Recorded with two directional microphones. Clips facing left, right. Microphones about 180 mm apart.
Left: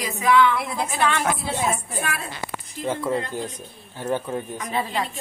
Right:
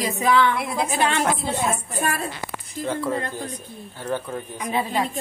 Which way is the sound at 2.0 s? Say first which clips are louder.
Right 5 dB; 45° right (ahead or behind).